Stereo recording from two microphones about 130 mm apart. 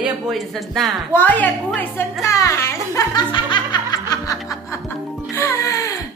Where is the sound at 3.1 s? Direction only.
35° left (ahead or behind).